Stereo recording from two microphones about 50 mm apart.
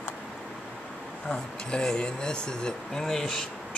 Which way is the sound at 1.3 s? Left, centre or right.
Centre.